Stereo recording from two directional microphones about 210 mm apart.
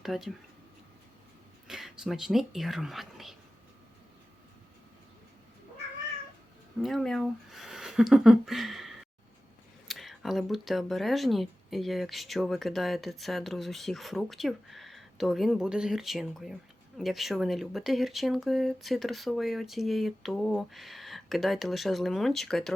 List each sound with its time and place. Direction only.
0.0 s speech: centre (ahead or behind)
1.6 s speech: centre (ahead or behind)
6.8 s speech: centre (ahead or behind)